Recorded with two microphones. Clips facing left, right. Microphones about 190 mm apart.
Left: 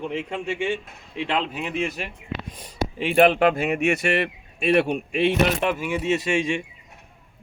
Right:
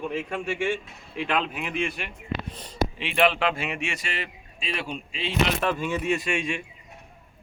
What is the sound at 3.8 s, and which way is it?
Speech, 65° left (ahead or behind).